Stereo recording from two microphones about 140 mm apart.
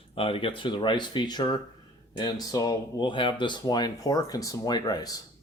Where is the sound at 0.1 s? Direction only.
40° left (ahead or behind).